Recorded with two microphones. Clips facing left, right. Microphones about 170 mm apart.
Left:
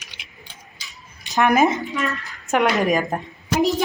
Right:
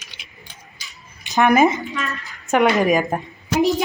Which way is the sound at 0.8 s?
Centre (ahead or behind).